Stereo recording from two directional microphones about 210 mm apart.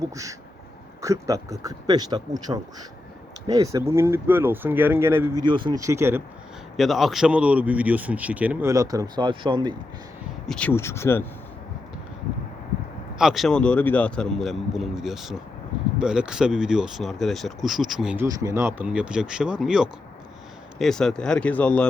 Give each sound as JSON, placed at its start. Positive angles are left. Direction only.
{"t": 0.1, "sound": "a man's voice", "side_deg": -15}
{"t": 5.5, "sound": "a man's voice", "side_deg": -20}
{"t": 6.7, "sound": "a man's voice", "side_deg": 0}
{"t": 10.4, "sound": "speech", "side_deg": 5}
{"t": 13.1, "sound": "speech", "side_deg": 0}